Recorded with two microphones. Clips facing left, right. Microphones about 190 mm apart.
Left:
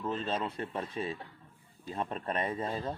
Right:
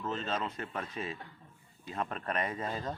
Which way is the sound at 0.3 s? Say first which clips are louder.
Left 2 dB; 30° left (ahead or behind).